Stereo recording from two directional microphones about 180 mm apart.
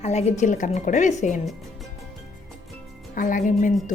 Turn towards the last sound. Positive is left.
turn(degrees=45)  # may be behind; listen again after turning